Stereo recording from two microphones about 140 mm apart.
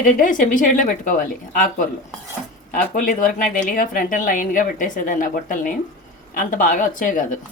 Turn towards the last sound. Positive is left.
turn(degrees=70)  # may be behind; listen again after turning